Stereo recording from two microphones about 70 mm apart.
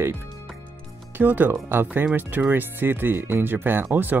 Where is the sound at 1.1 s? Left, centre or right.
Right.